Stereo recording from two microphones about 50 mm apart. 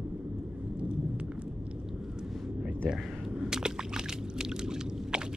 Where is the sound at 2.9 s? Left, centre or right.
Centre.